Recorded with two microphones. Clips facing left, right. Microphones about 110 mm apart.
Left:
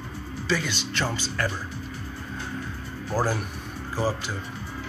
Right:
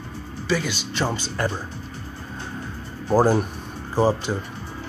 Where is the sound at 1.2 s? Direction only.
20° right (ahead or behind).